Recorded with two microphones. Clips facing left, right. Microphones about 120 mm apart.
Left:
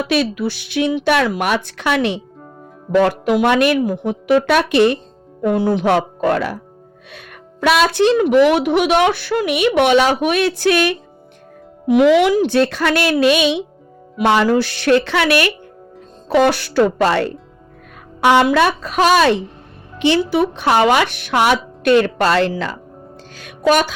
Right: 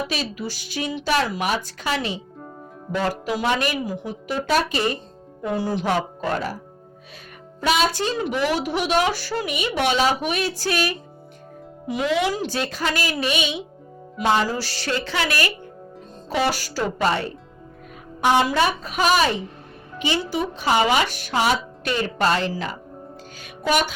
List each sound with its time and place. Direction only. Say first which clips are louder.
0.1 s a woman's voice: left 10 dB; 65° left (ahead or behind)
5.4 s speech: left 8 dB; 60° left (ahead or behind); by 6.6 s 75° left (ahead or behind)
7.6 s a woman's voice: left 7 dB; 80° left
12.3 s a woman's voice: left 11 dB; 60° left (ahead or behind); by 13.6 s 90° left
14.2 s speech: left 7 dB; 65° left (ahead or behind)
16.3 s speech: left 9 dB; 85° left
18.2 s a woman's voice: left 6 dB; 70° left (ahead or behind); by 19.4 s 90° left
20.1 s a woman's voice: left 9 dB; 70° left (ahead or behind); by 22.8 s 90° left
23.4 s music: left 7 dB; 90° left